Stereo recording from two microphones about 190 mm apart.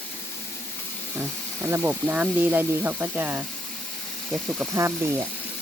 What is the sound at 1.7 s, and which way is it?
Speech, 10° right (ahead or behind).